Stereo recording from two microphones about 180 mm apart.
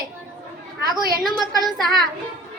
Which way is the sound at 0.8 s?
20° right (ahead or behind).